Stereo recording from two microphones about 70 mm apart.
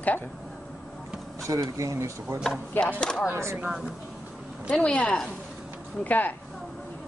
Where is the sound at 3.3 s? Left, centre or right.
Right.